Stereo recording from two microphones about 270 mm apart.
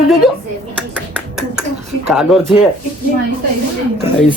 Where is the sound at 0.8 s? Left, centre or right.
Centre.